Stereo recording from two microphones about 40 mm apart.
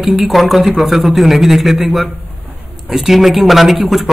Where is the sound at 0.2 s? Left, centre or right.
Centre.